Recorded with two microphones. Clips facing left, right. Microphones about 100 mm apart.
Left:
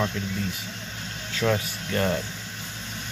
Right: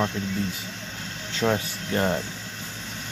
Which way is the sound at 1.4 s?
25° right (ahead or behind).